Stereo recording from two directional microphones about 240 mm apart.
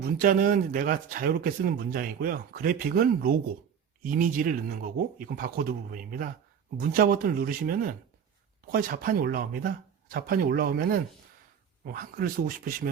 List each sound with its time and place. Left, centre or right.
0.2 s speech: right